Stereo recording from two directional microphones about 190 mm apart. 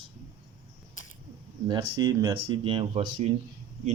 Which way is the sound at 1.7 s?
20° right (ahead or behind).